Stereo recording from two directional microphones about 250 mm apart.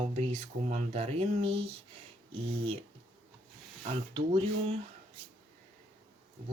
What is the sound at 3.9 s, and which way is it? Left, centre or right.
Speech, right.